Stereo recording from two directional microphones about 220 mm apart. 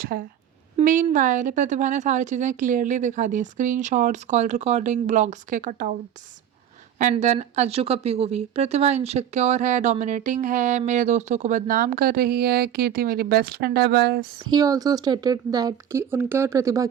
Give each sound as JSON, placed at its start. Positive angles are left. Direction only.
{"t": 0.0, "sound": "a woman's voice", "side_deg": -40}
{"t": 7.0, "sound": "a woman's voice", "side_deg": -30}
{"t": 14.5, "sound": "speech", "side_deg": -15}